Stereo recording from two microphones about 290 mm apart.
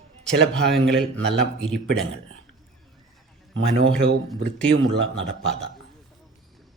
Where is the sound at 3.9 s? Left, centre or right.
Centre.